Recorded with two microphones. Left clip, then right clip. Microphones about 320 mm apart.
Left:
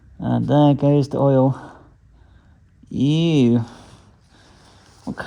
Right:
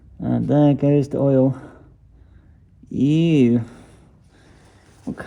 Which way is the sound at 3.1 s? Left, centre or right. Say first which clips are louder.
Right 1 dB; left.